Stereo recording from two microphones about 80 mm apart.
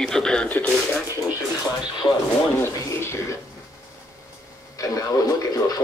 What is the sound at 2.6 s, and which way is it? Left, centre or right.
Speech, left.